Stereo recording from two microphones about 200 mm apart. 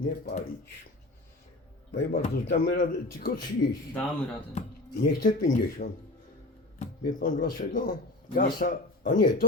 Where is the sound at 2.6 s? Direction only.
45° left (ahead or behind).